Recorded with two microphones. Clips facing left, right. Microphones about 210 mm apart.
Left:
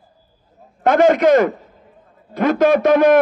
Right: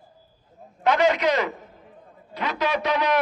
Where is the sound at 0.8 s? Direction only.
50° left (ahead or behind).